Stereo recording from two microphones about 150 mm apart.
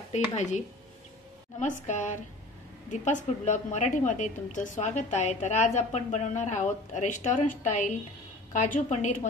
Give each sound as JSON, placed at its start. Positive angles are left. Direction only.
{"t": 0.1, "sound": "a woman's voice", "side_deg": 50}